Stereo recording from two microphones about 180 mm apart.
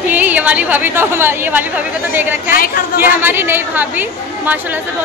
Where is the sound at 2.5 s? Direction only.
55° left (ahead or behind).